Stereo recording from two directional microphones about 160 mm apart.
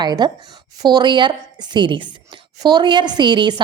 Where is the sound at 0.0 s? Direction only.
25° right (ahead or behind).